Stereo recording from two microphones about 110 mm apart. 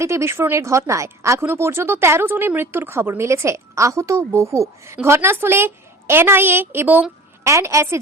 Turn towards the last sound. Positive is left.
turn(degrees=-25)  # may be behind; listen again after turning